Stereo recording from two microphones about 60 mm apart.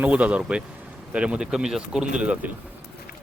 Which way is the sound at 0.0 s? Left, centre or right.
Right.